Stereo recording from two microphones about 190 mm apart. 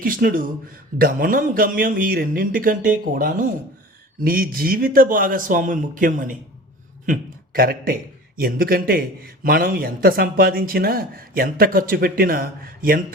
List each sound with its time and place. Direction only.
0.0 s a man's voice: 50° right (ahead or behind)